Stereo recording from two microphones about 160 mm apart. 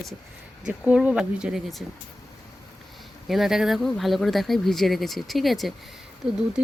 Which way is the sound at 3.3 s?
Centre (ahead or behind).